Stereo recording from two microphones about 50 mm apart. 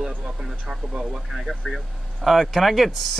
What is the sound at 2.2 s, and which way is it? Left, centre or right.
Speech, centre.